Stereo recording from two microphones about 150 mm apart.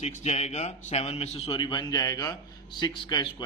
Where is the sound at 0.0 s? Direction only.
50° left (ahead or behind).